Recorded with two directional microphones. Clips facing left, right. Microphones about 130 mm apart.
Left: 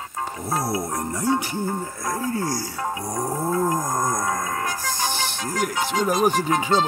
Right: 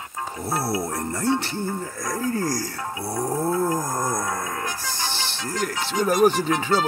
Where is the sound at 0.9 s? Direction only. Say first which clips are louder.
Even; 15° left (ahead or behind).